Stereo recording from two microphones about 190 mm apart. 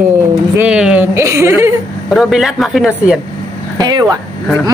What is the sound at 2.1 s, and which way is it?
Speech, centre (ahead or behind).